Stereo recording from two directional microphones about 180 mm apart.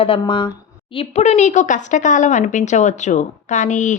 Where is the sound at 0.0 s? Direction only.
30° left (ahead or behind).